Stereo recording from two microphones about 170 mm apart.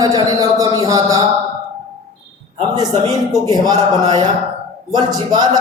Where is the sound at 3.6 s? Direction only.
25° right (ahead or behind).